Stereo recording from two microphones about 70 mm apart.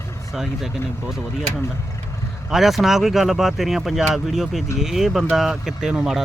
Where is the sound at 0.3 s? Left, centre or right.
Centre.